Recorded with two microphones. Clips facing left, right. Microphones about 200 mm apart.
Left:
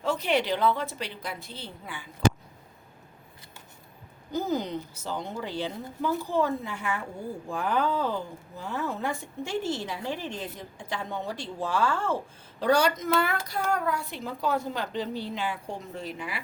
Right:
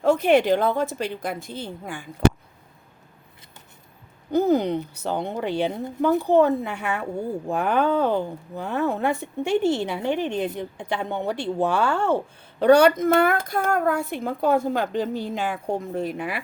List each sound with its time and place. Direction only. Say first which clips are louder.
0.0 s a woman's voice: right 9 dB; 50° right (ahead or behind)
4.3 s a woman's voice: right 9 dB; 60° right (ahead or behind)